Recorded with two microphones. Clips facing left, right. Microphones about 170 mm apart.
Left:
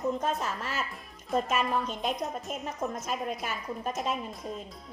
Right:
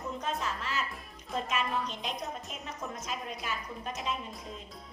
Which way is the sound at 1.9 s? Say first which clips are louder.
Left 6 dB; 50° left (ahead or behind).